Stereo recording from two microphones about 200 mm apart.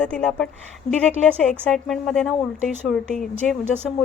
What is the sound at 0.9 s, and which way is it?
Speech, 35° left (ahead or behind).